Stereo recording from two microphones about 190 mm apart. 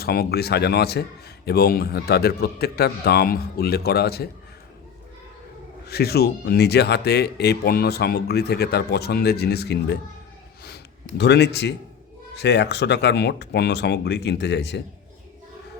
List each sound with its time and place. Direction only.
0.0 s speech: 55° left (ahead or behind)
5.9 s speech: 55° left (ahead or behind)
11.2 s speech: 65° left (ahead or behind)